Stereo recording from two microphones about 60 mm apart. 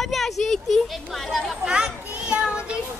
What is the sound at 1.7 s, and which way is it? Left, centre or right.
A child's voice, centre.